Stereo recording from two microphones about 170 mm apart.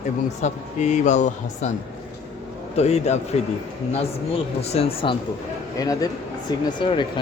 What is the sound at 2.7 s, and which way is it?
Speech, 40° left (ahead or behind).